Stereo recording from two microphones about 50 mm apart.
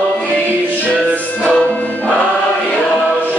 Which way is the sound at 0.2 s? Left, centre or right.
Left.